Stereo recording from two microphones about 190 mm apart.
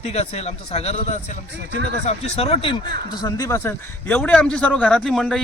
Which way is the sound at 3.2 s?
20° left (ahead or behind).